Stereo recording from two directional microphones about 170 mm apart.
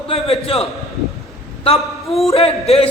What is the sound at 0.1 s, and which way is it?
A man's voice, 35° left (ahead or behind).